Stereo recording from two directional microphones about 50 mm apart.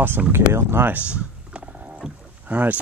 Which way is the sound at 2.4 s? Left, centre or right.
Right.